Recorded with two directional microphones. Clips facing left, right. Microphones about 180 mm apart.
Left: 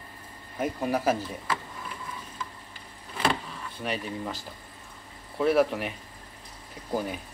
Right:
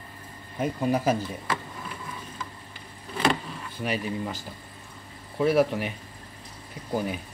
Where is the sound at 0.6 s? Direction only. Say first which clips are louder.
Right 2 dB; 5° left (ahead or behind).